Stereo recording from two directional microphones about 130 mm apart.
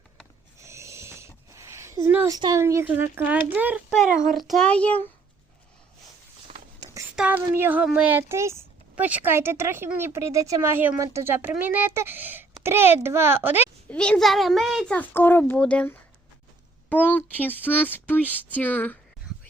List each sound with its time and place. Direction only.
0.6 s a sound: 20° right (ahead or behind)
2.3 s speech: 25° right (ahead or behind)
4.3 s speech: centre (ahead or behind)
7.2 s speech: 10° right (ahead or behind)
13.9 s a child's voice: 5° left (ahead or behind)
14.9 s speech: 15° left (ahead or behind)